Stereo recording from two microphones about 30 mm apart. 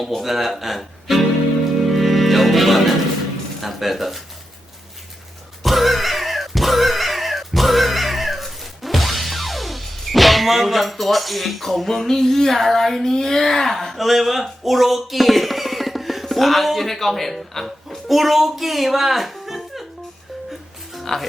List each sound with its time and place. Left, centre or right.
0.2 s speech: centre
1.9 s music: centre
3.6 s speech: centre
5.6 s a sound: centre
13.1 s speech: centre
13.9 s speech: centre
21.1 s speech: centre